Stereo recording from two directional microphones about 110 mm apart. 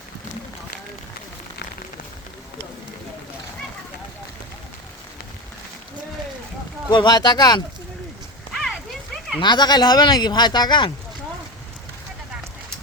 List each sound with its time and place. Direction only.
6.9 s speech: 40° left (ahead or behind)
8.6 s a sound: centre (ahead or behind)
9.4 s speech: 40° left (ahead or behind)